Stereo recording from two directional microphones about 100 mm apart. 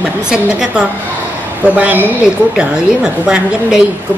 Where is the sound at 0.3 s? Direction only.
5° right (ahead or behind).